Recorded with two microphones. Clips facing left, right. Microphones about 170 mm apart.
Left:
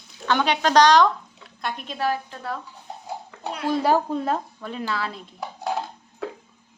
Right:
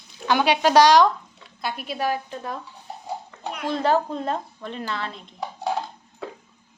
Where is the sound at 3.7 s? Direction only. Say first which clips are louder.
Left 1 dB; 10° left (ahead or behind).